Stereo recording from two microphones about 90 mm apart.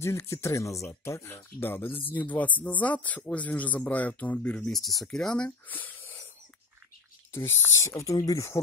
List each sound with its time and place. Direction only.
0.0 s speech: 30° left (ahead or behind)
4.6 s speech: 5° left (ahead or behind)
5.7 s a sound: 20° left (ahead or behind)
7.3 s speech: 30° left (ahead or behind)